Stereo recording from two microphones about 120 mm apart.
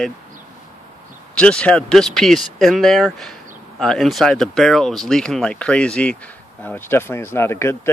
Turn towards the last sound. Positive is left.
turn(degrees=20)  # may be behind; listen again after turning